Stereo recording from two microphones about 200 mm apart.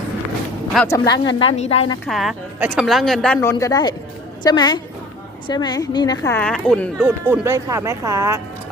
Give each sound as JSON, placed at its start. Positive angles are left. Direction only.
{"t": 0.9, "sound": "a woman's voice", "side_deg": 20}
{"t": 1.4, "sound": "a woman's voice", "side_deg": 30}
{"t": 2.0, "sound": "a woman's voice", "side_deg": 0}
{"t": 3.4, "sound": "a woman's voice", "side_deg": 15}
{"t": 7.0, "sound": "speech", "side_deg": -5}